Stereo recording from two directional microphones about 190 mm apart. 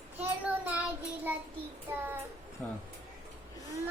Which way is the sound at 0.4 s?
10° right (ahead or behind).